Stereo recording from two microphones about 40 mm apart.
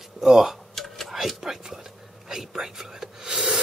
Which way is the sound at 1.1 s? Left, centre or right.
Centre.